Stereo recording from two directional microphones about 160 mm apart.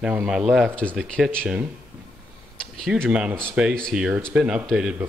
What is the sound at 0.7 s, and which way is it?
Speech, 10° left (ahead or behind).